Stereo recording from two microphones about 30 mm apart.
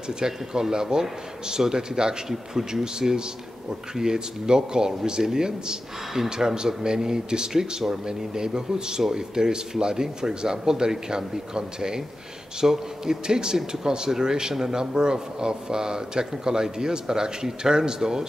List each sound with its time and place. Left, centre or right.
0.2 s a man's voice: right